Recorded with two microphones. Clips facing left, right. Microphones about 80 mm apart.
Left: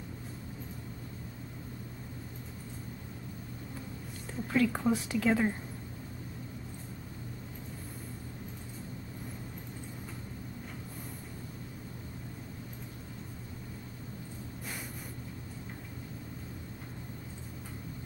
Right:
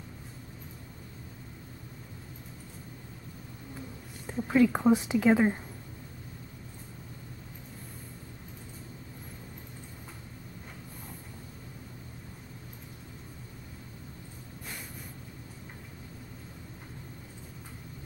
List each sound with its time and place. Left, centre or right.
4.3 s speech: right